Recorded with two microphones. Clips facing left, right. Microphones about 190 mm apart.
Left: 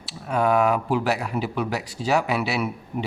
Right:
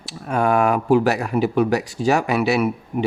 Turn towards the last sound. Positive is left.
turn(degrees=-50)  # may be behind; listen again after turning